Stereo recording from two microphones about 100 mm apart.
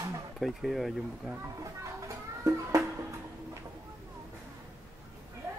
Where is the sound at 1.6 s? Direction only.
30° right (ahead or behind).